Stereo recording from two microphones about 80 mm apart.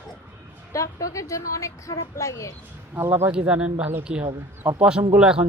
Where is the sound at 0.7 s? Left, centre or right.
Left.